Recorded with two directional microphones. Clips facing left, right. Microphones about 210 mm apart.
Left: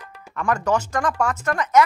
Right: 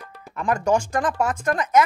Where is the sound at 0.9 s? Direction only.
30° right (ahead or behind).